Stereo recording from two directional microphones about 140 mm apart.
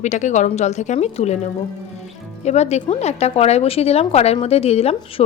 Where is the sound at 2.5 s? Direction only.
50° left (ahead or behind).